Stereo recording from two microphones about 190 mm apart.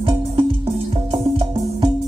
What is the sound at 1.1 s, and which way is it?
Music, 30° right (ahead or behind).